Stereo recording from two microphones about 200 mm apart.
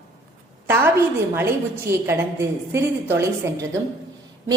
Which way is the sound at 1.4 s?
10° right (ahead or behind).